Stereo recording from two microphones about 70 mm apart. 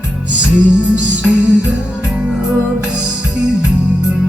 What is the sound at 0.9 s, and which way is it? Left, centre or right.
Music, centre.